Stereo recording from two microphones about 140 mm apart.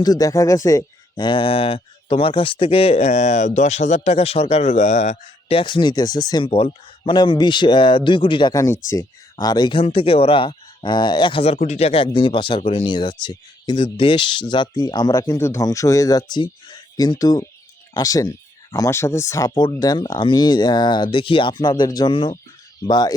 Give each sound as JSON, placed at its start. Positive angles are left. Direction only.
{"t": 0.0, "sound": "speech", "side_deg": 25}
{"t": 5.5, "sound": "speech", "side_deg": 35}
{"t": 8.5, "sound": "speech", "side_deg": 20}
{"t": 9.8, "sound": "speech", "side_deg": 40}
{"t": 11.5, "sound": "speech", "side_deg": 55}